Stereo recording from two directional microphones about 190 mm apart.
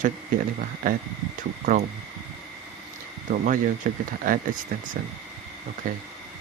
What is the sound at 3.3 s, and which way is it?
Speech, 45° right (ahead or behind).